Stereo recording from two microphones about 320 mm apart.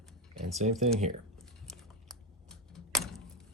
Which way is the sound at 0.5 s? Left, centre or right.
Right.